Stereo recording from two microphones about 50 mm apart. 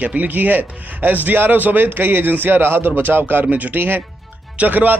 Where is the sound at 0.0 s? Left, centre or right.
Right.